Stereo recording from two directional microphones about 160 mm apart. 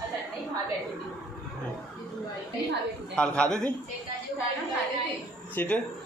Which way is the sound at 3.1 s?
5° left (ahead or behind).